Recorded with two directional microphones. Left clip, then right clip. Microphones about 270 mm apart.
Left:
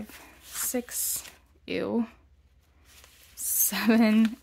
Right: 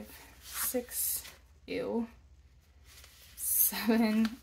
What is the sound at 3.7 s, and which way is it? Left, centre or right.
Speech, left.